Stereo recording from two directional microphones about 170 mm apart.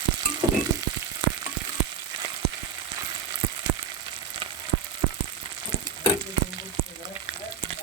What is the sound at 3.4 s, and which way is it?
Frying, 30° right (ahead or behind).